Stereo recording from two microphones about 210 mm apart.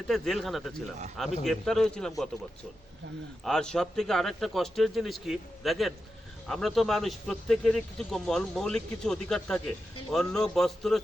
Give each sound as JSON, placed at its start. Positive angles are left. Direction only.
{"t": 0.1, "sound": "a man's voice", "side_deg": 0}
{"t": 3.4, "sound": "a man's voice", "side_deg": 5}